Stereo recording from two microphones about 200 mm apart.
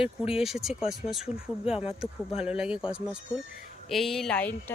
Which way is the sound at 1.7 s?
30° left (ahead or behind).